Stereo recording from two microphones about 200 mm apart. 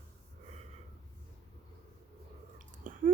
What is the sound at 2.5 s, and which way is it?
Whispering, 40° right (ahead or behind).